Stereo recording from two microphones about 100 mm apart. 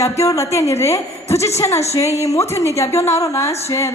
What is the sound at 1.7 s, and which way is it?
Speech, 90° left.